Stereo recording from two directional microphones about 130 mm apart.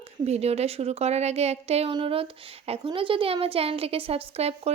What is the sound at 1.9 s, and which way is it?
A woman's voice, 40° right (ahead or behind).